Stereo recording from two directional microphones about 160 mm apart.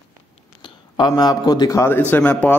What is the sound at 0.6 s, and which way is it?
A man's voice, 30° left (ahead or behind).